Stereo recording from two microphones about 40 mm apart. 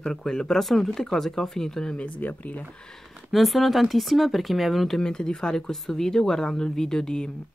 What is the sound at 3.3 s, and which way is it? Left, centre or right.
Speech, centre.